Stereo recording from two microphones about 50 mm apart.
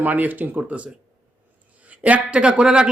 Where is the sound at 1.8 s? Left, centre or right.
Right.